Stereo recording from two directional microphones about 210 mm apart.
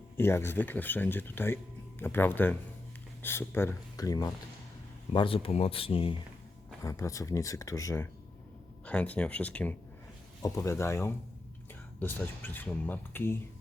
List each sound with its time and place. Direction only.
0.2 s speech: 10° left (ahead or behind)
6.8 s speech: 15° left (ahead or behind)